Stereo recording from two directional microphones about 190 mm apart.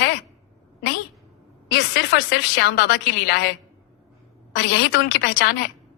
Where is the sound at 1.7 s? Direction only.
60° left (ahead or behind).